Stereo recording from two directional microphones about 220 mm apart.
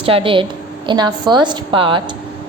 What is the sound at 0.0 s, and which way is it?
A woman's voice, 25° right (ahead or behind).